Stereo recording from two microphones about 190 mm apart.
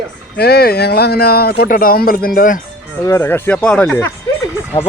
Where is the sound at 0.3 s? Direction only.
55° left (ahead or behind).